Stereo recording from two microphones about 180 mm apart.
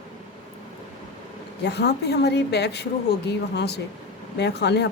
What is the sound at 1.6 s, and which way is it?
A woman's voice, 65° left (ahead or behind).